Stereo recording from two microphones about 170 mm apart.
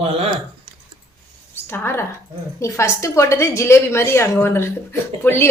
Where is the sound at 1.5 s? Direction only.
15° left (ahead or behind).